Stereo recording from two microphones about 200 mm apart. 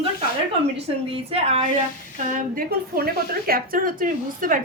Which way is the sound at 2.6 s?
50° right (ahead or behind).